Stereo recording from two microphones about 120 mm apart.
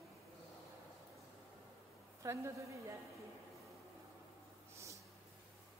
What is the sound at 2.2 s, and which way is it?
Speech, 25° right (ahead or behind).